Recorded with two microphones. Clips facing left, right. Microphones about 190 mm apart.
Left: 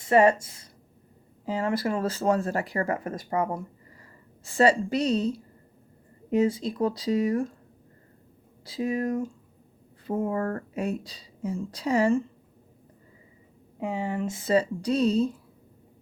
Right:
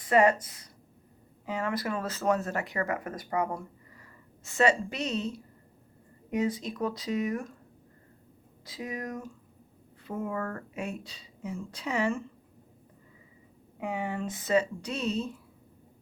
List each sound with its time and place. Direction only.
0.0 s a woman's voice: 25° left (ahead or behind)
6.3 s a woman's voice: 30° left (ahead or behind)
8.6 s a woman's voice: 30° left (ahead or behind)
13.7 s a woman's voice: 25° left (ahead or behind)